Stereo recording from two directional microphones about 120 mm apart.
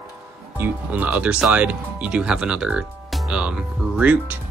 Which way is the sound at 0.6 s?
15° right (ahead or behind).